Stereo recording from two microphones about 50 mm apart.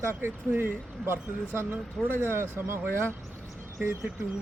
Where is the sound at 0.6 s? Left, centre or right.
Right.